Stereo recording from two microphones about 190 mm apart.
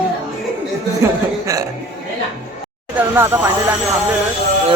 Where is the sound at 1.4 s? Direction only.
15° right (ahead or behind).